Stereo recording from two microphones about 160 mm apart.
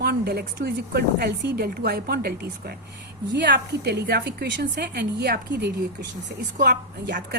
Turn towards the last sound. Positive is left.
turn(degrees=-70)  # may be behind; listen again after turning